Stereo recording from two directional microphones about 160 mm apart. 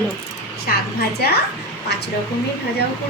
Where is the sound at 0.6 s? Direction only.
80° left.